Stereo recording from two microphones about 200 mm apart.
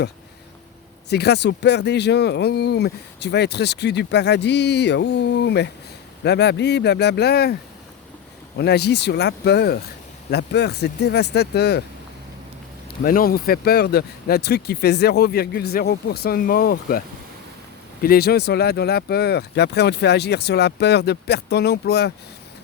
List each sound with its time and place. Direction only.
1.1 s speech: 55° left (ahead or behind)
8.5 s speech: 55° left (ahead or behind)
12.9 s speech: 45° left (ahead or behind)
18.0 s speech: 50° left (ahead or behind)